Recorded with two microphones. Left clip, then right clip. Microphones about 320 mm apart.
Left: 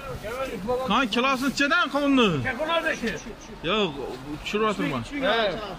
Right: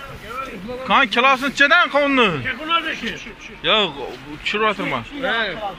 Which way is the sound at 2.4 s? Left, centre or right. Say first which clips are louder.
Right 4 dB; left.